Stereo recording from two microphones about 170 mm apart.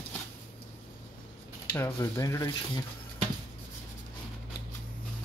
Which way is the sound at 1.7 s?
15° left (ahead or behind).